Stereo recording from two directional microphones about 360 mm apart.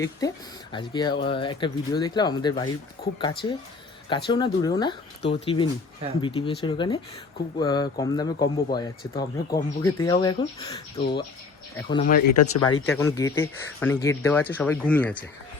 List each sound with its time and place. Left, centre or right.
0.2 s speech: centre
12.5 s speech: left
12.9 s speech: centre